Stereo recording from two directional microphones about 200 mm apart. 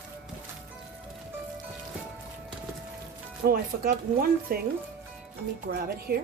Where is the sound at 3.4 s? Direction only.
45° right (ahead or behind).